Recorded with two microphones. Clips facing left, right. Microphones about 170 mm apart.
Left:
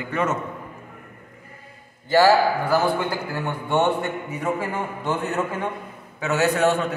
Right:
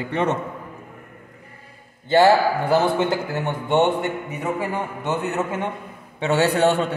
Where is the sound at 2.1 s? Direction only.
25° right (ahead or behind).